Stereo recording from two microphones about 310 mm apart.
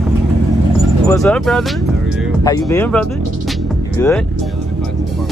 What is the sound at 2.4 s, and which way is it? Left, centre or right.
Music, centre.